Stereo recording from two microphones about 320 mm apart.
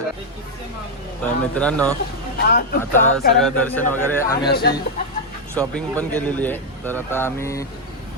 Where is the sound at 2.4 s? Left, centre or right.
Left.